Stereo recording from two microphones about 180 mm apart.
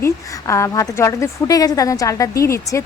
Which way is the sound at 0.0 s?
15° left (ahead or behind).